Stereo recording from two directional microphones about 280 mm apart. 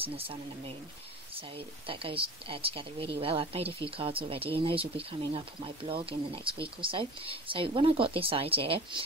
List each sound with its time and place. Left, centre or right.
0.0 s speech: centre